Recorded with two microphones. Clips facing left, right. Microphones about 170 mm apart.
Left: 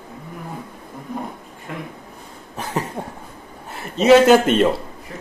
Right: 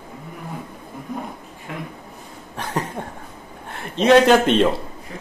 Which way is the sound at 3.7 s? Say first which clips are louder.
Left 2 dB; 5° left (ahead or behind).